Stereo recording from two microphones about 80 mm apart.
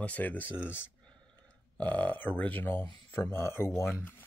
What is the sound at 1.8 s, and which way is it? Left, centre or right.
Speech, centre.